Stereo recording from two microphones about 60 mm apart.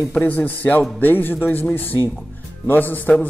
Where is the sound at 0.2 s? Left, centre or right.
Left.